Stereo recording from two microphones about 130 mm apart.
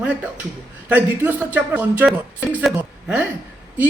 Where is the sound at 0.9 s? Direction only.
15° right (ahead or behind).